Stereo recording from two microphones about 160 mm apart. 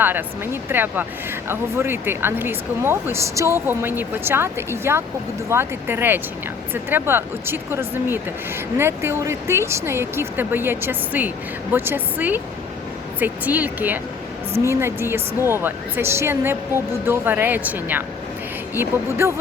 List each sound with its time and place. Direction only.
0.0 s speech: 10° right (ahead or behind)